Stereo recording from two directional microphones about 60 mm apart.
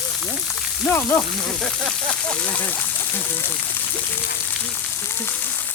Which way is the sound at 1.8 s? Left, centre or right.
Centre.